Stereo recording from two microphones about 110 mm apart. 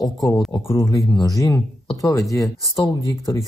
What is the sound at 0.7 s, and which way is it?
Speech, 30° left (ahead or behind).